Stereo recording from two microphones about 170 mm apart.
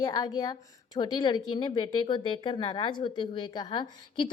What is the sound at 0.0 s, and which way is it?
Speech, 20° left (ahead or behind).